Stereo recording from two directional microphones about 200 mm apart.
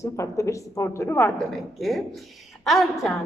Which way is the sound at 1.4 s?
Centre (ahead or behind).